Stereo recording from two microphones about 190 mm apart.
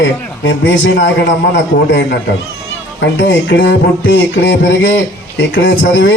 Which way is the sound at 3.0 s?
75° left (ahead or behind).